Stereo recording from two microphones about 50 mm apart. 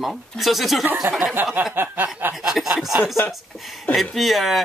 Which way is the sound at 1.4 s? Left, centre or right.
Right.